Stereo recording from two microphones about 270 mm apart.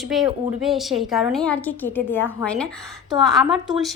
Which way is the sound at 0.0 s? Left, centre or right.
Centre.